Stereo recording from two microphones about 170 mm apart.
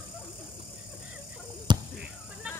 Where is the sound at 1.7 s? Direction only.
25° right (ahead or behind).